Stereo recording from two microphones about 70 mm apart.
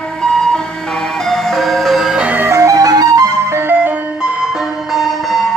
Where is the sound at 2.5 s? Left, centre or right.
Right.